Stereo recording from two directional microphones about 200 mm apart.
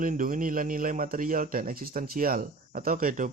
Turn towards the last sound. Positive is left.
turn(degrees=-45)  # may be behind; listen again after turning